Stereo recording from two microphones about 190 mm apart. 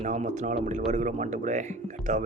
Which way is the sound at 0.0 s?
40° right (ahead or behind).